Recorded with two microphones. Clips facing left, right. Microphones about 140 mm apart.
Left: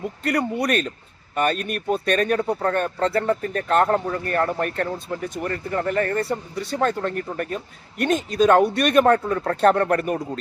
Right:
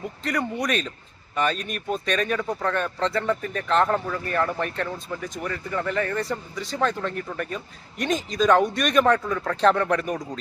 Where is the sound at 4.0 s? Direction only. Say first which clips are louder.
Left 4 dB; 25° left (ahead or behind).